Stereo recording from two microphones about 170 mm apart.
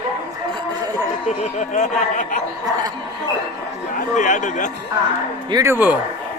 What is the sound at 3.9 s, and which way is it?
Speech, 50° left (ahead or behind).